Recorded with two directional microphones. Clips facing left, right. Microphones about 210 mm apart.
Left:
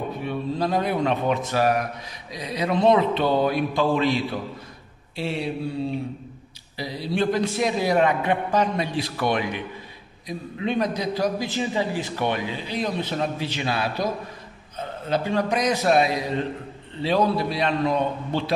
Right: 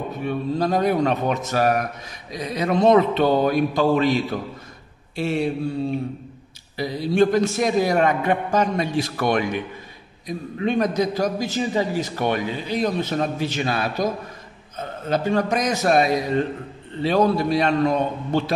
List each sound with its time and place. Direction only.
0.2 s a man's voice: 45° right (ahead or behind)
6.8 s a man's voice: 50° right (ahead or behind)
15.0 s a man's voice: 45° right (ahead or behind)